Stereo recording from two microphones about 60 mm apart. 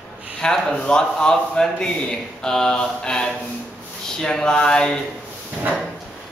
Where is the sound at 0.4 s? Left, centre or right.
Centre.